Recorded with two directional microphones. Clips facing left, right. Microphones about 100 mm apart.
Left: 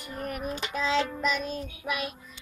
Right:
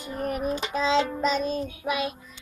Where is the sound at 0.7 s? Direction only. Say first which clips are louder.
Right 3 dB; 25° right (ahead or behind).